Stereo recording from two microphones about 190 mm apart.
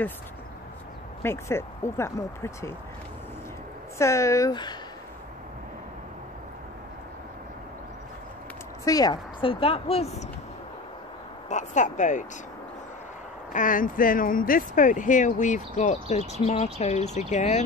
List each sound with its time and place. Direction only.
1.2 s speech: 15° left (ahead or behind)
4.0 s speech: 15° left (ahead or behind)
8.8 s a woman's voice: 20° left (ahead or behind)
11.4 s speech: 40° left (ahead or behind)
13.5 s speech: 45° left (ahead or behind)